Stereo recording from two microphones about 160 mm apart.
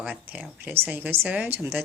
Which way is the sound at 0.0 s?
10° right (ahead or behind).